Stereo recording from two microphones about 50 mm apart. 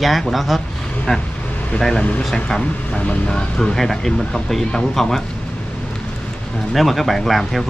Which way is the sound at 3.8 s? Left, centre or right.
Centre.